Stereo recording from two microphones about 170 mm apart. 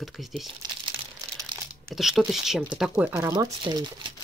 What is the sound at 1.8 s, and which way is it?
Speech, centre (ahead or behind).